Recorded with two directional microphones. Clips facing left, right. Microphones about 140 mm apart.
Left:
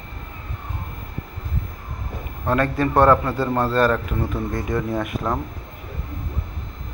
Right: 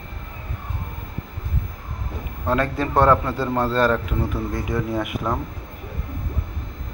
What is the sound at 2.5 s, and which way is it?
Speech, 15° right (ahead or behind).